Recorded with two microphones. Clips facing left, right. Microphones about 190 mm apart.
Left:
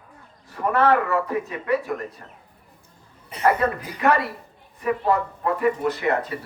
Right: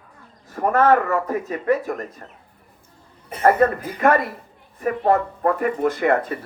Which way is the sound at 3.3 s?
50° right (ahead or behind).